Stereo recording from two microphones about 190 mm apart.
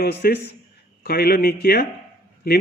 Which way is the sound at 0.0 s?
55° left (ahead or behind).